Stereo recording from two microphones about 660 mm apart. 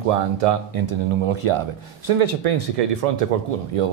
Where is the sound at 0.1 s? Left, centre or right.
Right.